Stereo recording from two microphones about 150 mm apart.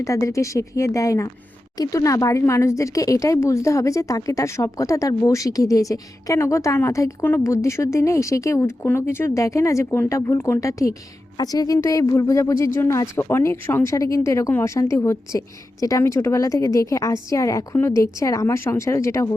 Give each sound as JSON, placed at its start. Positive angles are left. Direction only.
{"t": 0.0, "sound": "speech", "side_deg": 20}